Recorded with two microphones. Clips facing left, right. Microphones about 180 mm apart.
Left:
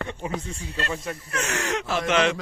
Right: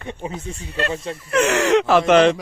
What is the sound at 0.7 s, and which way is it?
Speech, 65° right (ahead or behind).